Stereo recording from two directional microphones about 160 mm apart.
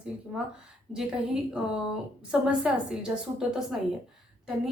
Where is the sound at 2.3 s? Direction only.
5° right (ahead or behind).